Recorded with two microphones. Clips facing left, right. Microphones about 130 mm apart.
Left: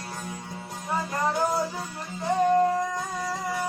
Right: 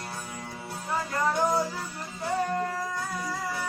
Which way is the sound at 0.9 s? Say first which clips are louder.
Left 1 dB; 20° left (ahead or behind).